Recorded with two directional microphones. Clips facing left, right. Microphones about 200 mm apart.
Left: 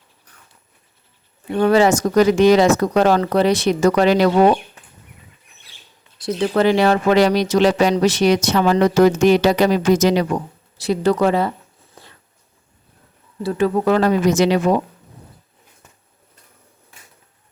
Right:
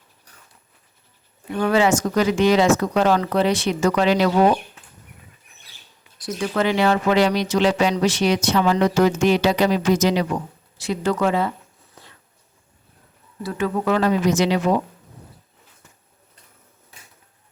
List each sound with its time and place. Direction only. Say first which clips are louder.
1.5 s speech: left 4 dB; 40° left (ahead or behind)
6.1 s speech: left 5 dB; 25° left (ahead or behind); by 10.2 s 45° left (ahead or behind)
10.8 s speech: left 5 dB; 35° left (ahead or behind)
13.4 s speech: left 5 dB; 35° left (ahead or behind)